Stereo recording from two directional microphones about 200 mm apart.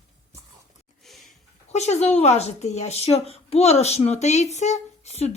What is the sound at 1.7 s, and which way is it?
Speech, 35° left (ahead or behind).